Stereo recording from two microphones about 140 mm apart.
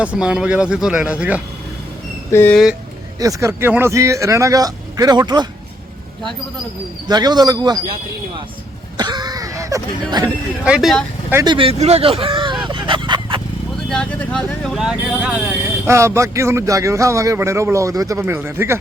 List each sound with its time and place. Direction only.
0.0 s speech: 10° right (ahead or behind)
2.3 s speech: 15° left (ahead or behind)
3.2 s speech: 25° right (ahead or behind)
7.1 s speech: 30° right (ahead or behind)
9.0 s speech: 30° right (ahead or behind)
10.6 s speech: 5° right (ahead or behind)
11.4 s speech: 40° right (ahead or behind)
12.6 s a sound: 35° right (ahead or behind)
13.9 s speech: 10° left (ahead or behind)
15.9 s speech: 20° right (ahead or behind)